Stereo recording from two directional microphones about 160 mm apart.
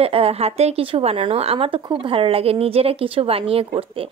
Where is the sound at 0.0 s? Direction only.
40° right (ahead or behind).